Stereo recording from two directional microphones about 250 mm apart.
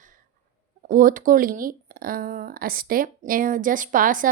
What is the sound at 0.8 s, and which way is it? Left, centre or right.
Speech, right.